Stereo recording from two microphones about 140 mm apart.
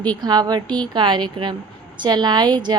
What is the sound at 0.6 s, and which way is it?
Mantra, 10° left (ahead or behind).